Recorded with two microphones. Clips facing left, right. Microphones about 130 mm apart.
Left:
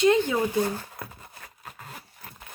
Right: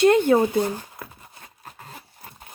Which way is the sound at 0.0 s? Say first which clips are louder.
Right 5 dB; 55° right (ahead or behind).